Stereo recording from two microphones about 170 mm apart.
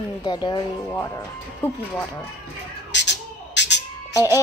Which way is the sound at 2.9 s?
90° left.